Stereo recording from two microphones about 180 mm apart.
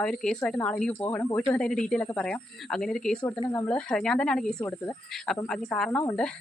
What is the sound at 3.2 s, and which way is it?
Speech, 20° left (ahead or behind).